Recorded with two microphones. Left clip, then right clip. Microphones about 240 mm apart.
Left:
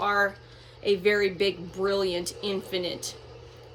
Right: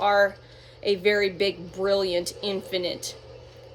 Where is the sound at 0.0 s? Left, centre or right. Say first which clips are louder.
Right 4 dB; centre.